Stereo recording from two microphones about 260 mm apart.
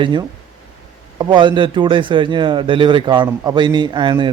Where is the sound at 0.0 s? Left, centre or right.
Centre.